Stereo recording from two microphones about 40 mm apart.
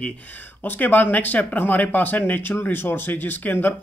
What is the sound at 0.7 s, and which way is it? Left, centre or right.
Speech, left.